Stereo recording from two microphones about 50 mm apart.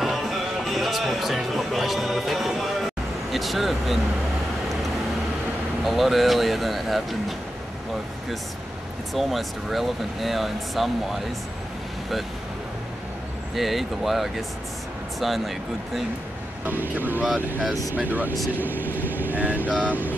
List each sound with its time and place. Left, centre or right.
0.0 s speech: centre
5.9 s speech: centre
9.1 s speech: centre
13.6 s speech: centre
16.6 s speech: right